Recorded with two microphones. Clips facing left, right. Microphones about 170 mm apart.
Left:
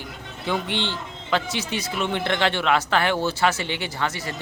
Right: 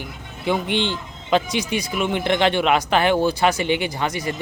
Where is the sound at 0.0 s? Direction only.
15° right (ahead or behind).